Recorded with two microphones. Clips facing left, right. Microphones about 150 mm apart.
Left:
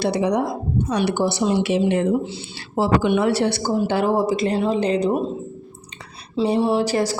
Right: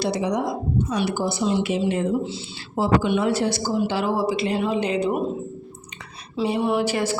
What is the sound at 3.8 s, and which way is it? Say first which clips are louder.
A woman's voice: left 4 dB; 50° left (ahead or behind).